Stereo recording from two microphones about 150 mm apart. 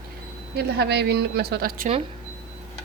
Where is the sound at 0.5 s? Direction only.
90° right.